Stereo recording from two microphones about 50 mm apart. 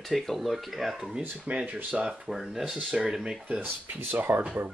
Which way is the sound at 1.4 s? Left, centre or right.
Right.